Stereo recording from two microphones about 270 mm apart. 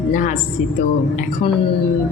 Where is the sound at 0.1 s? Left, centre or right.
Left.